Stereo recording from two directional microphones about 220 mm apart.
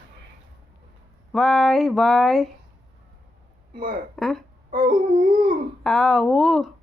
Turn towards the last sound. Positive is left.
turn(degrees=0)  # may be behind; listen again after turning